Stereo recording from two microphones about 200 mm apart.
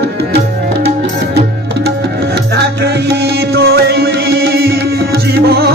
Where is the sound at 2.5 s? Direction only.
55° right (ahead or behind).